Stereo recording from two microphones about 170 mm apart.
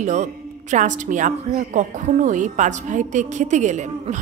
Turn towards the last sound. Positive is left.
turn(degrees=-45)  # may be behind; listen again after turning